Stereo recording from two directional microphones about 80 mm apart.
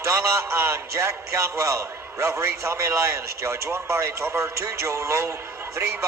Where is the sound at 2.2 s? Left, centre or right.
Right.